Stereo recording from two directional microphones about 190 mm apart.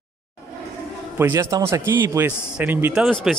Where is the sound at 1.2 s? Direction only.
15° right (ahead or behind).